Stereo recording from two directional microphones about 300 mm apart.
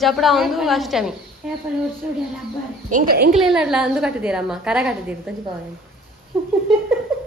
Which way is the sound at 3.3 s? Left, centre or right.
Centre.